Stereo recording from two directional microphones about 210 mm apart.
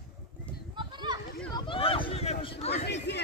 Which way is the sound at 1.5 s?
25° left (ahead or behind).